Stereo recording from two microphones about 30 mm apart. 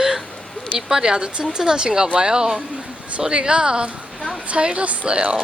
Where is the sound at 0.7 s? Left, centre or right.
Right.